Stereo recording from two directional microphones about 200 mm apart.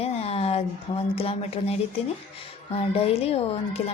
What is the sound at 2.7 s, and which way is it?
A woman's voice, 30° left (ahead or behind).